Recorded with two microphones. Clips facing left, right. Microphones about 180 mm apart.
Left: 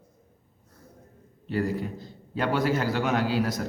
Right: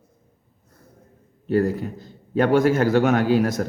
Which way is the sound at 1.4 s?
45° right (ahead or behind).